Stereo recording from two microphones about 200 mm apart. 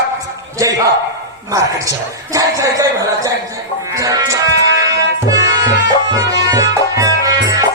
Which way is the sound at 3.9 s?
15° right (ahead or behind).